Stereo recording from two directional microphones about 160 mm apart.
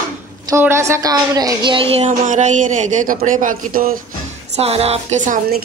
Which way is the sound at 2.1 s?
50° right (ahead or behind).